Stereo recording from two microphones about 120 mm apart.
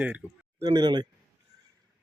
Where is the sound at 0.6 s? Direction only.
35° right (ahead or behind).